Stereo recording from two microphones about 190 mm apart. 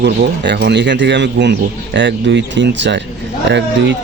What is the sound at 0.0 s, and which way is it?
Speech, 60° right (ahead or behind).